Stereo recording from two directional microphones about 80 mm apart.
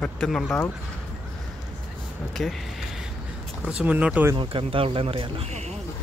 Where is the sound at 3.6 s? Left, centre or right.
Centre.